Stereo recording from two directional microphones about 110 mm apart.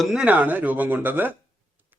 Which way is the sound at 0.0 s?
5° right (ahead or behind).